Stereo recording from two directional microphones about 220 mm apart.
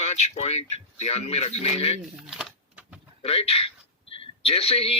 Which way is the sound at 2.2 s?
Centre (ahead or behind).